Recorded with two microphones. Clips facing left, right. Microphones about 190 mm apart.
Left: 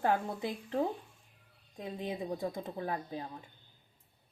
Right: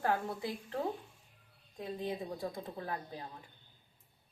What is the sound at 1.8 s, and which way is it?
A woman's voice, 20° left (ahead or behind).